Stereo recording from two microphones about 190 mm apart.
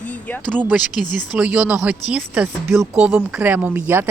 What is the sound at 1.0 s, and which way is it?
Speech, 40° left (ahead or behind).